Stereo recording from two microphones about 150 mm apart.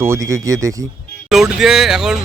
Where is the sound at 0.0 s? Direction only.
20° right (ahead or behind).